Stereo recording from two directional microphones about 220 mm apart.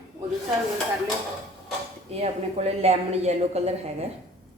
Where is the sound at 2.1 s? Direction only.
30° right (ahead or behind).